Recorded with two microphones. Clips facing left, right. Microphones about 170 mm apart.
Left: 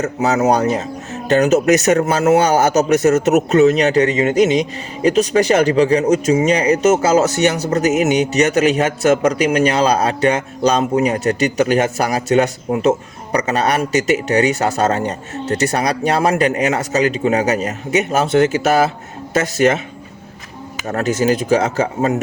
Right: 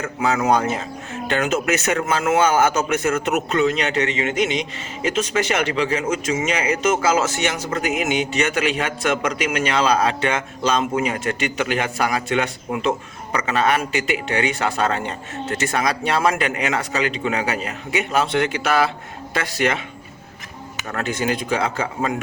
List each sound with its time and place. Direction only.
0.0 s speech: 40° left (ahead or behind)
20.8 s speech: 40° left (ahead or behind)